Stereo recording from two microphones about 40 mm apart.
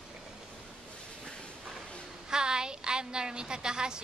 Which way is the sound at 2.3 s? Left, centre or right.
Centre.